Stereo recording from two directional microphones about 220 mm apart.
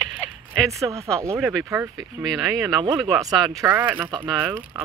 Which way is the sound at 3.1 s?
15° right (ahead or behind).